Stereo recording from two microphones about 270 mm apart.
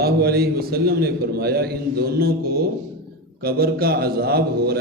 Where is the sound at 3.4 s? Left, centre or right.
Right.